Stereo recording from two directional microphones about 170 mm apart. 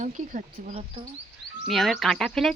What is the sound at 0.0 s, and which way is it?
Speech, 45° right (ahead or behind).